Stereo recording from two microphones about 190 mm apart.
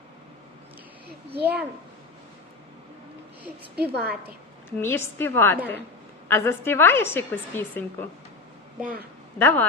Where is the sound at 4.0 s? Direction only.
55° right (ahead or behind).